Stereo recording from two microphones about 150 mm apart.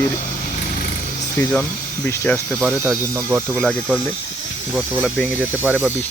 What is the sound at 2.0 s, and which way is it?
Speech, 10° left (ahead or behind).